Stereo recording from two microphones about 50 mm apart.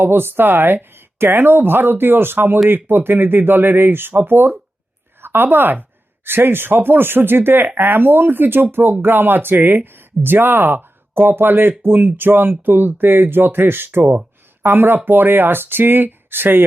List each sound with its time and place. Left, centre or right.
0.0 s a woman's voice: right